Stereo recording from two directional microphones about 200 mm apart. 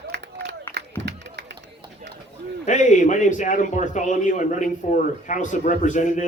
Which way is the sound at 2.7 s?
40° left (ahead or behind).